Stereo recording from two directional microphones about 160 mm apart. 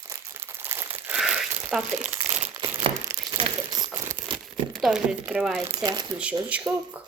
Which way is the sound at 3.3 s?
25° right (ahead or behind).